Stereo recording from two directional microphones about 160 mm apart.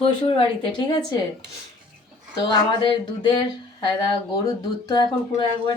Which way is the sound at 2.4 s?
30° left (ahead or behind).